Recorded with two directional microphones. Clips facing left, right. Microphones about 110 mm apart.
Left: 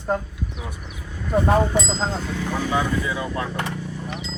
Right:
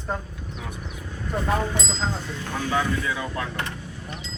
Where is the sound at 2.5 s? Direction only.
10° left (ahead or behind).